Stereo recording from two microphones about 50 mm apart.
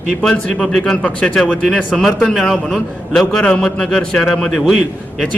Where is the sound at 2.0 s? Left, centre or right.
Centre.